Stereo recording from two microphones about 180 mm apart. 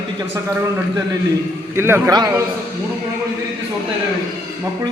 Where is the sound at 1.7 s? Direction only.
15° right (ahead or behind).